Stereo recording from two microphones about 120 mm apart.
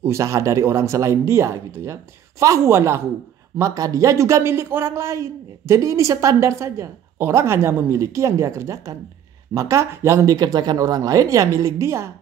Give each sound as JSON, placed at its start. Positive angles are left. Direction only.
{"t": 0.0, "sound": "speech", "side_deg": -25}